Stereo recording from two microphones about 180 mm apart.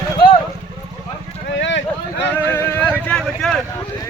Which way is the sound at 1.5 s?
85° left.